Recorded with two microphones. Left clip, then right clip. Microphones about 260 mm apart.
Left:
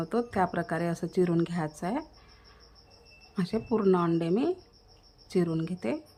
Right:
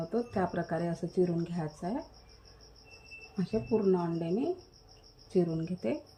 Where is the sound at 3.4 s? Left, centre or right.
Centre.